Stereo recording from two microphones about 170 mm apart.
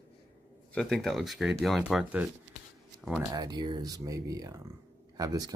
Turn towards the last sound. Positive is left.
turn(degrees=-20)  # may be behind; listen again after turning